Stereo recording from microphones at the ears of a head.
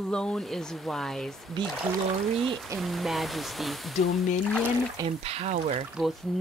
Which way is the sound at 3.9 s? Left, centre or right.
Left.